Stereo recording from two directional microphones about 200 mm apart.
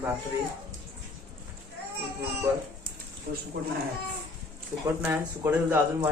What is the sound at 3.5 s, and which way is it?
Speech, 50° right (ahead or behind).